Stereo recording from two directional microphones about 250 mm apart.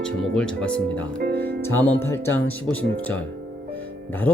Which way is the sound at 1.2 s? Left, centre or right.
Right.